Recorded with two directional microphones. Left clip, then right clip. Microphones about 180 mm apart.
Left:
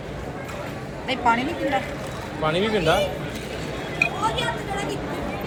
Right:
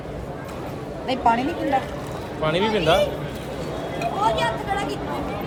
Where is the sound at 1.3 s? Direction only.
55° right (ahead or behind).